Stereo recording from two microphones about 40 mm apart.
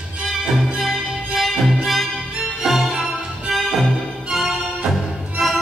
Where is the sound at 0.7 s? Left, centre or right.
Centre.